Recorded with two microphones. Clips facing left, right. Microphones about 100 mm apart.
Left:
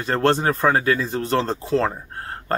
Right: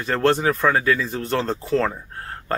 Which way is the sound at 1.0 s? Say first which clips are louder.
Left 2 dB; 25° left (ahead or behind).